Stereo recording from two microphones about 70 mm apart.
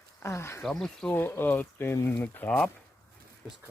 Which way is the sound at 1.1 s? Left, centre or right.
Left.